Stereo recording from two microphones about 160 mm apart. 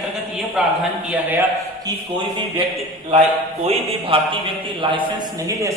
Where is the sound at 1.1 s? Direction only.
10° right (ahead or behind).